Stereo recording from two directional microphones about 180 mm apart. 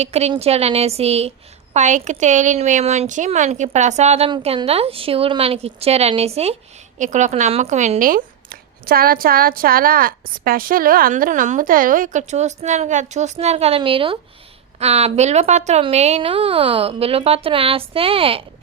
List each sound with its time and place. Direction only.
0.0 s a woman's voice: 35° right (ahead or behind)